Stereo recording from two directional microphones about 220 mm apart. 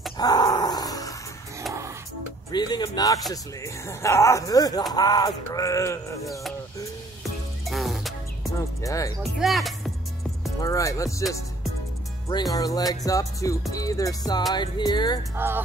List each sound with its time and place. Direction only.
0.2 s dog: 15° left (ahead or behind)
2.5 s music: 20° left (ahead or behind)
7.6 s music: centre (ahead or behind)
8.8 s music: 15° left (ahead or behind)
9.2 s music: centre (ahead or behind)
10.6 s music: 15° left (ahead or behind)
12.3 s music: 20° left (ahead or behind)
15.3 s speech: 10° right (ahead or behind)